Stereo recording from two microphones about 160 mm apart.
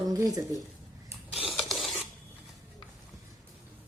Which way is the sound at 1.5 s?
Centre (ahead or behind).